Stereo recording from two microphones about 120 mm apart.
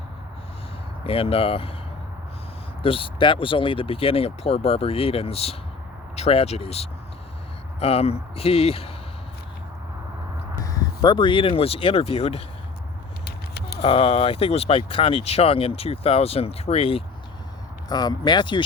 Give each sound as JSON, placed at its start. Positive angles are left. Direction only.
{"t": 1.0, "sound": "speech", "side_deg": 50}
{"t": 2.8, "sound": "speech", "side_deg": 50}
{"t": 10.6, "sound": "speech", "side_deg": 30}
{"t": 13.8, "sound": "speech", "side_deg": 50}
{"t": 17.8, "sound": "speech", "side_deg": 35}